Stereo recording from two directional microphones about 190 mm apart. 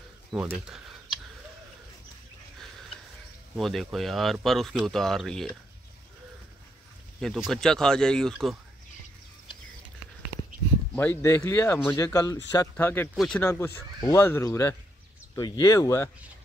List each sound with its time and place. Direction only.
0.3 s speech: 5° right (ahead or behind)
3.5 s speech: centre (ahead or behind)
7.2 s speech: centre (ahead or behind)
11.0 s speech: 10° left (ahead or behind)
13.1 s speech: centre (ahead or behind)
13.4 s speech: 15° left (ahead or behind)